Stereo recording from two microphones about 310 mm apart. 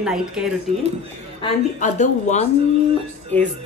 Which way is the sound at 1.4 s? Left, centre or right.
Left.